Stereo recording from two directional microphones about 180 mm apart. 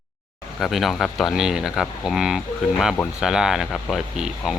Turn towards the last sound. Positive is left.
turn(degrees=0)  # may be behind; listen again after turning